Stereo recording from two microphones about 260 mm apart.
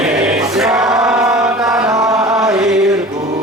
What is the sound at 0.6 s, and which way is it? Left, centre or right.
Chant, centre.